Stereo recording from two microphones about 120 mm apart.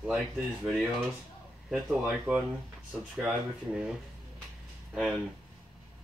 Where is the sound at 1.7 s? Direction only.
10° right (ahead or behind).